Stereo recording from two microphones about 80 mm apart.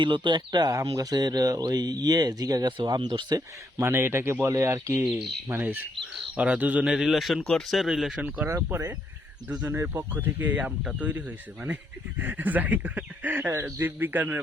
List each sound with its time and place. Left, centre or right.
0.0 s speech: right
2.6 s speech: right
3.8 s speech: right
5.5 s speech: right
6.9 s speech: centre
8.4 s speech: right